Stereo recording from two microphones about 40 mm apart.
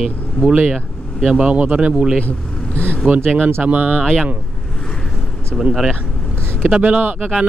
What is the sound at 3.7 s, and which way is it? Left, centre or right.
Speech, right.